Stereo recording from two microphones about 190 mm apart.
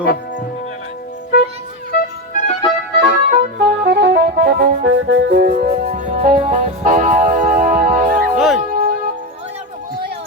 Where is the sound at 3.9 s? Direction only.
60° right (ahead or behind).